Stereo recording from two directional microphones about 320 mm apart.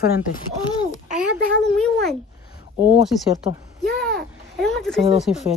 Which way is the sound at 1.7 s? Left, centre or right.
Centre.